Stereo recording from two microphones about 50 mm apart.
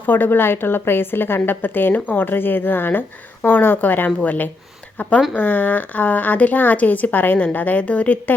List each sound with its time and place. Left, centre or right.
0.0 s a woman's voice: left